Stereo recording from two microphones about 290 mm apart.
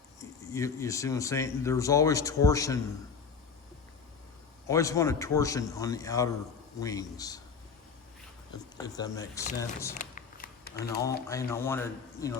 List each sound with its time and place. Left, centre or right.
0.2 s speech: centre
4.7 s speech: centre
9.0 s speech: centre
10.0 s a sound: left
11.3 s speech: centre